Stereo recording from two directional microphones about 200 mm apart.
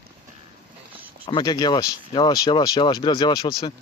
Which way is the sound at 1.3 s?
20° left (ahead or behind).